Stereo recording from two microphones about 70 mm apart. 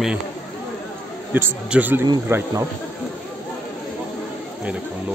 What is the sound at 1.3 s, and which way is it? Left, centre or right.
A man's voice, right.